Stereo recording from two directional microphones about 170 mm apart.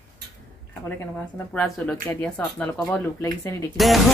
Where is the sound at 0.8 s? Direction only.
10° left (ahead or behind).